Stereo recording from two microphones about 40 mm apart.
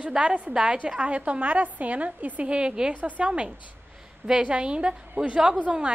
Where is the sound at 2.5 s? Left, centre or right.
Right.